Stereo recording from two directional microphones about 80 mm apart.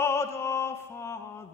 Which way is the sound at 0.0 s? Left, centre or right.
Left.